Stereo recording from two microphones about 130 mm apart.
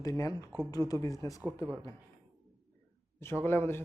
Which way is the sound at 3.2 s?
20° left (ahead or behind).